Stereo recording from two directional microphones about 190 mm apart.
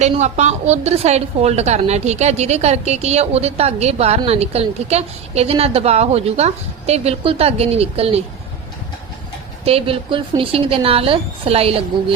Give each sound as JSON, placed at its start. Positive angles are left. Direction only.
{"t": 0.0, "sound": "a woman's voice", "side_deg": -35}
{"t": 9.6, "sound": "a woman's voice", "side_deg": -30}